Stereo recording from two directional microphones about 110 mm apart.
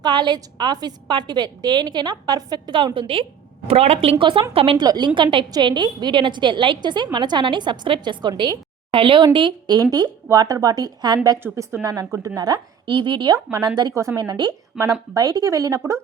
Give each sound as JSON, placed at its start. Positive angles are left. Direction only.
{"t": 0.0, "sound": "a woman's voice", "side_deg": -40}
{"t": 3.7, "sound": "speech", "side_deg": -70}
{"t": 4.8, "sound": "a woman's voice", "side_deg": -40}
{"t": 8.9, "sound": "a woman's voice", "side_deg": -50}
{"t": 11.4, "sound": "a woman's voice", "side_deg": -25}
{"t": 13.9, "sound": "speech", "side_deg": -25}
{"t": 14.2, "sound": "a woman's voice", "side_deg": -40}